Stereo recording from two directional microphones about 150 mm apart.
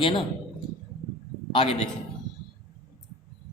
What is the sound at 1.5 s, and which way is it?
Speech, 35° left (ahead or behind).